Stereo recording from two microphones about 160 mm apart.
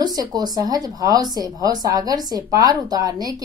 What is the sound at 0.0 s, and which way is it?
Speech, 25° right (ahead or behind).